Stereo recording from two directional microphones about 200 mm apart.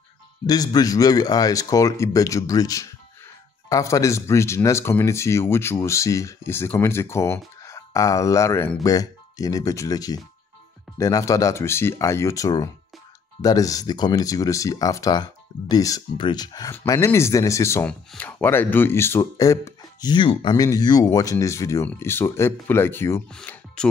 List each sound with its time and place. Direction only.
0.5 s speech: 20° left (ahead or behind)